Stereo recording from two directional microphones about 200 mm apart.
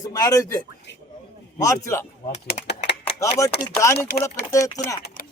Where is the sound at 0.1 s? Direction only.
20° left (ahead or behind).